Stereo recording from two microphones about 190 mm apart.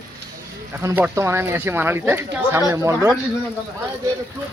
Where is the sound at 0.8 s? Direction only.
10° right (ahead or behind).